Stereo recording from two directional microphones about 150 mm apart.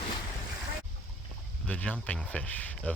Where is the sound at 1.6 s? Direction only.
10° left (ahead or behind).